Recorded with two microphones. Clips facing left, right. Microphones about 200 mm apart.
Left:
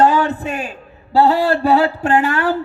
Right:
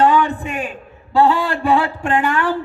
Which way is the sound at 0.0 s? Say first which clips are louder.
Left 1 dB; 40° left (ahead or behind).